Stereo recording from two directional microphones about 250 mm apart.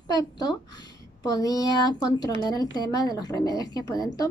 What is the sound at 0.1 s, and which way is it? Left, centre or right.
A woman's voice, centre.